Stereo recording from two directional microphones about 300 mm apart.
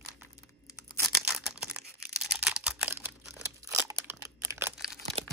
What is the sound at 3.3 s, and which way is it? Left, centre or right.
Crunch, centre.